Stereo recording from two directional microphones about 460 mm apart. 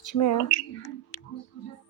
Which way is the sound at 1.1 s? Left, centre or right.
Left.